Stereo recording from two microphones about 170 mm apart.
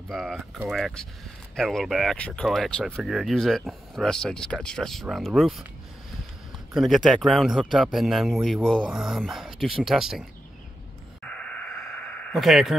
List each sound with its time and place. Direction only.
0.1 s speech: centre (ahead or behind)
6.7 s speech: centre (ahead or behind)
11.2 s a sound: 5° left (ahead or behind)